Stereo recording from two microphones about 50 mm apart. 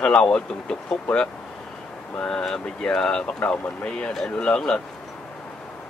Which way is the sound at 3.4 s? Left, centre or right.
Left.